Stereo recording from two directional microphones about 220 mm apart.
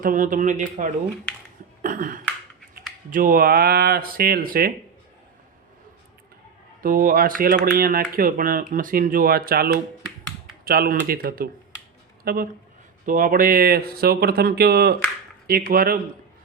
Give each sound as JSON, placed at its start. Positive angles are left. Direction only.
{"t": 0.0, "sound": "speech", "side_deg": -35}
{"t": 1.8, "sound": "a sound", "side_deg": -40}
{"t": 3.1, "sound": "speech", "side_deg": -40}
{"t": 6.8, "sound": "speech", "side_deg": -40}
{"t": 10.7, "sound": "speech", "side_deg": -40}